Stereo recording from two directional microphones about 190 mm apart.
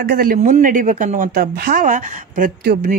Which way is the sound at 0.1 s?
50° right (ahead or behind).